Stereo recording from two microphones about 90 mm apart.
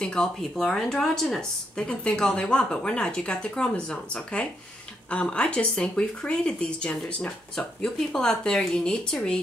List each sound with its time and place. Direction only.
0.0 s speech: 10° left (ahead or behind)